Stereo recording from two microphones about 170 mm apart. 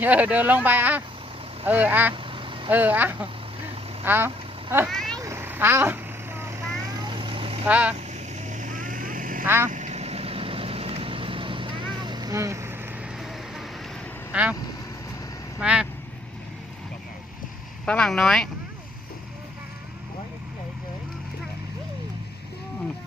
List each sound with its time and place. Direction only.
0.0 s speech: 10° right (ahead or behind)
2.2 s vehicle: 30° right (ahead or behind)
2.6 s speech: 10° right (ahead or behind)
4.9 s vehicle: centre (ahead or behind)
5.1 s vehicle: 15° right (ahead or behind)
7.7 s speech: 10° right (ahead or behind)
8.1 s vehicle: 45° right (ahead or behind); by 12.7 s 15° right (ahead or behind)
13.1 s vehicle: centre (ahead or behind)
14.3 s speech: 5° right (ahead or behind)
15.5 s speech: 5° right (ahead or behind)
17.8 s speech: 5° left (ahead or behind)